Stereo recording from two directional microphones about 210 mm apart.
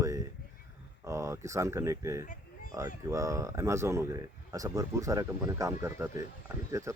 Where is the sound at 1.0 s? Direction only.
15° right (ahead or behind).